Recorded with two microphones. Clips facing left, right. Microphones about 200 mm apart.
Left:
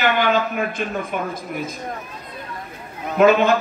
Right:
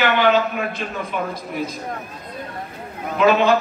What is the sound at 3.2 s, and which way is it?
Speech, 50° left (ahead or behind).